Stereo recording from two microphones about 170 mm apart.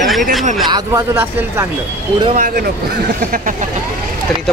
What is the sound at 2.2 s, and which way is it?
Speech, 45° right (ahead or behind).